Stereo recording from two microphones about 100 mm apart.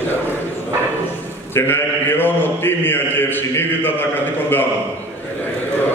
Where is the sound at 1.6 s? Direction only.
20° left (ahead or behind).